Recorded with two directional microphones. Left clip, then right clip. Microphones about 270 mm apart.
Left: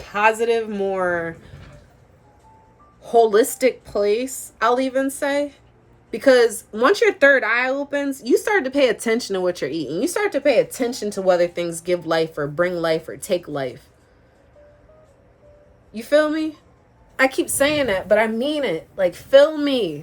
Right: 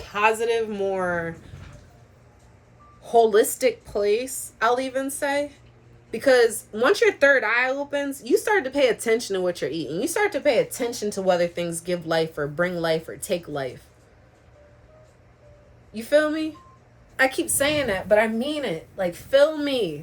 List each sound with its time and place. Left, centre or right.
0.0 s speech: left
3.0 s speech: left
15.9 s speech: centre